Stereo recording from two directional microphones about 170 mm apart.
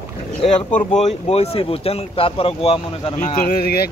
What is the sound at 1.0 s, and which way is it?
Speech, 40° left (ahead or behind).